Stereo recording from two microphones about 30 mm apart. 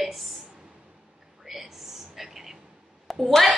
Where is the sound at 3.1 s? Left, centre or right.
Centre.